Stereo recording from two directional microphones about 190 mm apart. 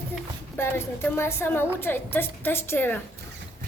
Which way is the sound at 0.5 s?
10° left (ahead or behind).